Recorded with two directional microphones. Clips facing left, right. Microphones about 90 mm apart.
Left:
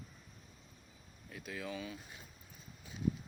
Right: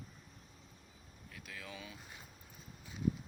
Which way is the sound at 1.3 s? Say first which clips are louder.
Left 6 dB; 20° left (ahead or behind).